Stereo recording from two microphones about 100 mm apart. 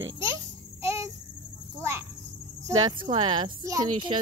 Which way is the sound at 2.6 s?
40° right (ahead or behind).